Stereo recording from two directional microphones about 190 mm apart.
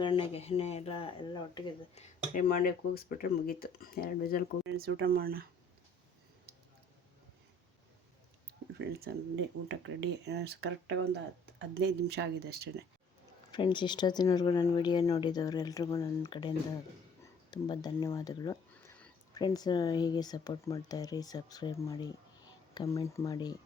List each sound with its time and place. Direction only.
0.0 s speech: 30° left (ahead or behind)
2.0 s speech: 45° left (ahead or behind)
4.8 s speech: 55° right (ahead or behind)
8.8 s speech: 55° right (ahead or behind); by 11.2 s 75° right (ahead or behind)
11.6 s speech: 60° right (ahead or behind)
13.5 s speech: 25° left (ahead or behind)
19.3 s speech: 20° left (ahead or behind)